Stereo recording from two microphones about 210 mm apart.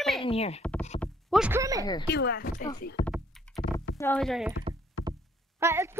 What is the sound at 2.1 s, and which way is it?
Speech, 50° left (ahead or behind).